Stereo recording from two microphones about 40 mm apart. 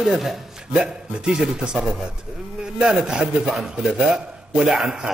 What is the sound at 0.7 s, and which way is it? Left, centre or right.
A man's voice, centre.